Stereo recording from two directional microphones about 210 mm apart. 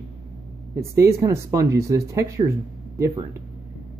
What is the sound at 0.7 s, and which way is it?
Speech, 15° right (ahead or behind).